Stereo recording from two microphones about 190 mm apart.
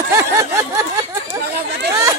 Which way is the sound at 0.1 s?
15° right (ahead or behind).